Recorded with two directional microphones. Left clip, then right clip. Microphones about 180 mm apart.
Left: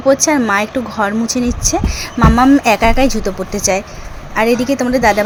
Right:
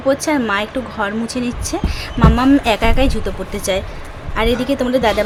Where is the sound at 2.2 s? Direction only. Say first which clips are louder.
Left 4 dB; 15° left (ahead or behind).